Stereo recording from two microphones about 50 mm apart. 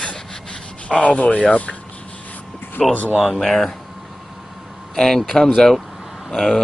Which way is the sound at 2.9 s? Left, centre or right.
Left.